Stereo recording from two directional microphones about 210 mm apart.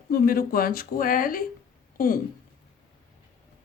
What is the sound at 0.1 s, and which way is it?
Speech, 45° left (ahead or behind).